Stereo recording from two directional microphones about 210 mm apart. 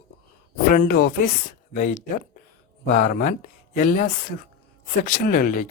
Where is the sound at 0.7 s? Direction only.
45° left (ahead or behind).